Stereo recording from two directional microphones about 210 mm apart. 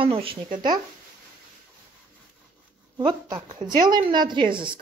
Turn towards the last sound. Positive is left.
turn(degrees=-25)  # may be behind; listen again after turning